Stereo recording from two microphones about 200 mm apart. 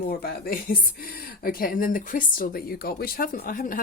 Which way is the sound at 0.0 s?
50° left (ahead or behind).